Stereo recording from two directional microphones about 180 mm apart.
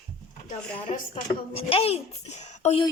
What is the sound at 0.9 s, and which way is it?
A woman's voice, 45° left (ahead or behind).